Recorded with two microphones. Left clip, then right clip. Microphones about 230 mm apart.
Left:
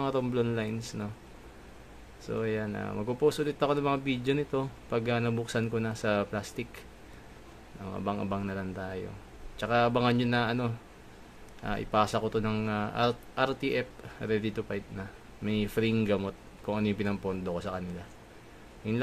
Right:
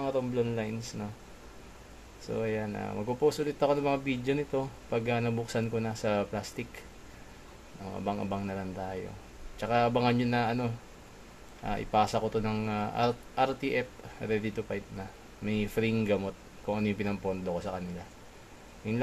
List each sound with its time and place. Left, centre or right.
0.0 s speech: left
2.2 s a man's voice: centre
7.9 s a man's voice: centre